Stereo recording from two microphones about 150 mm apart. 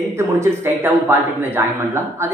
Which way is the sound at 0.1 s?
15° right (ahead or behind).